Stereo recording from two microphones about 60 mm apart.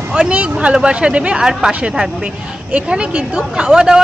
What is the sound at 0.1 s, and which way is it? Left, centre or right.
Speech, centre.